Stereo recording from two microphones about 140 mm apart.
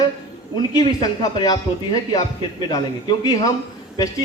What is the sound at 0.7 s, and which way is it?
Speech, 25° left (ahead or behind).